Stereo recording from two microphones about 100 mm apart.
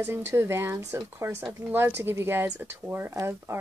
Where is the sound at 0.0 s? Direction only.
25° right (ahead or behind).